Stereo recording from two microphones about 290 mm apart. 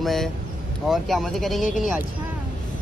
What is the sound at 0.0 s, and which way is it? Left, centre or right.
Speech, centre.